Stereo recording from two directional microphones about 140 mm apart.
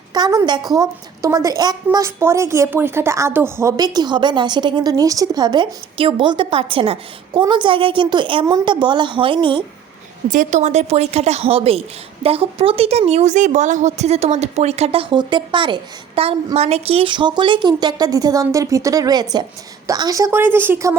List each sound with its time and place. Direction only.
0.1 s a woman's voice: 25° right (ahead or behind)
10.2 s a woman's voice: 65° right (ahead or behind); by 15.0 s 45° right (ahead or behind)
15.1 s a woman's voice: 35° right (ahead or behind); by 20.9 s 20° right (ahead or behind)